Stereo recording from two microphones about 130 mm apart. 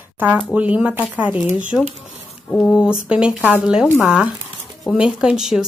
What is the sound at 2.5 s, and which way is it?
Speech, 5° left (ahead or behind).